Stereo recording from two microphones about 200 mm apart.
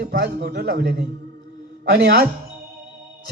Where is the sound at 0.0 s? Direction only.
60° right (ahead or behind).